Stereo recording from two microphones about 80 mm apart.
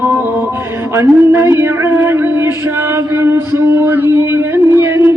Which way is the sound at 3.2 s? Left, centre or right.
Right.